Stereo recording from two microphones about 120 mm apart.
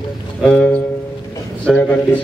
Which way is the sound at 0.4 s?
5° left (ahead or behind).